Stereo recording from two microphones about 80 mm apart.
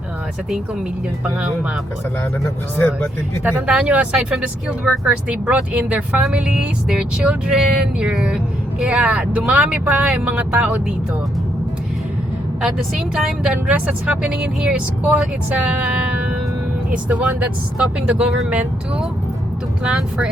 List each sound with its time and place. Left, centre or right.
1.2 s speech: centre
2.7 s speech: left
3.4 s speech: centre
13.1 s speech: centre
17.1 s speech: centre
19.8 s speech: centre